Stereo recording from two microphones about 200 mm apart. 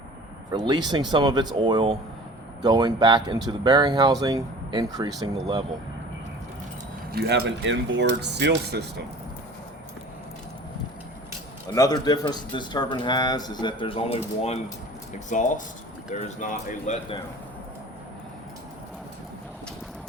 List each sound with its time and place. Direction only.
0.5 s speech: 20° right (ahead or behind)
7.1 s speech: 55° right (ahead or behind)
11.7 s speech: 20° left (ahead or behind); by 17.0 s 40° left (ahead or behind)